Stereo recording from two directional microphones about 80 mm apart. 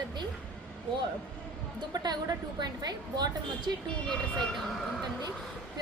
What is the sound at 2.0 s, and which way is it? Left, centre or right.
A woman's voice, right.